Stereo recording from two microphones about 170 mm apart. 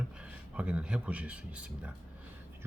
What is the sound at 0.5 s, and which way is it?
Speech, 5° right (ahead or behind).